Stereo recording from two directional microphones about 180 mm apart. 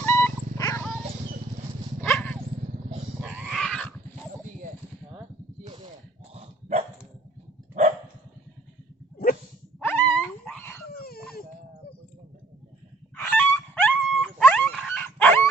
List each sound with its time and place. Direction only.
0.0 s dog: 10° left (ahead or behind)
2.0 s dog: 5° left (ahead or behind)
3.2 s a sound: 5° right (ahead or behind)
6.3 s dog: 35° right (ahead or behind)
9.8 s dog: 10° left (ahead or behind)
10.8 s dog: 60° left (ahead or behind)
13.2 s dog: 10° left (ahead or behind)